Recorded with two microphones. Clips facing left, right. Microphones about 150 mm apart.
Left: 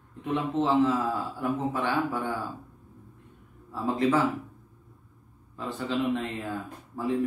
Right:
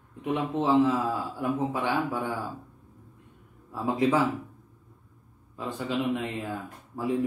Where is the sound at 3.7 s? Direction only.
15° right (ahead or behind).